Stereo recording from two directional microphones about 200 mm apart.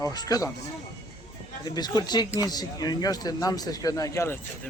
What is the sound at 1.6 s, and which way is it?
Speech, 20° left (ahead or behind).